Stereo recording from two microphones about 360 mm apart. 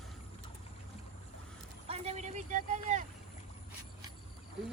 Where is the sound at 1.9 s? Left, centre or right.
Centre.